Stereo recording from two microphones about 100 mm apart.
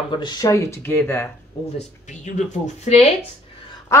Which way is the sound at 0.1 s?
50° left (ahead or behind).